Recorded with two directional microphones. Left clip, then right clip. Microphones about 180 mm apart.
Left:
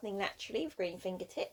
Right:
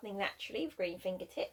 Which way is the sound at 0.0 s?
45° left (ahead or behind).